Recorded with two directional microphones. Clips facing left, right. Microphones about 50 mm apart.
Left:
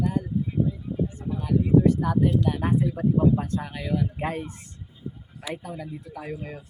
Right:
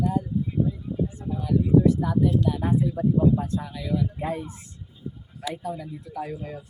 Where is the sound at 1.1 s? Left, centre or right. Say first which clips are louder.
Even; left.